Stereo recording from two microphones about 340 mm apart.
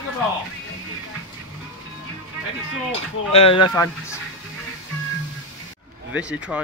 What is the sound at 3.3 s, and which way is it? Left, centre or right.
Speech, centre.